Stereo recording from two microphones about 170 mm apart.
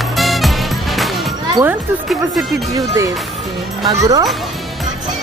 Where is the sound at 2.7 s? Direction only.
20° right (ahead or behind).